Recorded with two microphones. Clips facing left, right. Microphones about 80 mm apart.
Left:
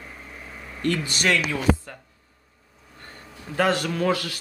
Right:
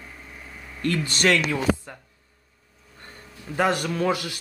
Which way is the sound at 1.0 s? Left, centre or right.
Right.